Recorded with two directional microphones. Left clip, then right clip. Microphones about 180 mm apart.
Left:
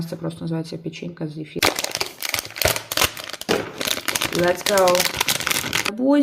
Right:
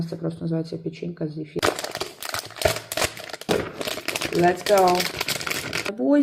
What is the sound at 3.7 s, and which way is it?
Crumpling, 40° left (ahead or behind).